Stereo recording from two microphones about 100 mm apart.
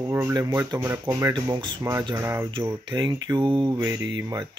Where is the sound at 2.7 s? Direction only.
45° right (ahead or behind).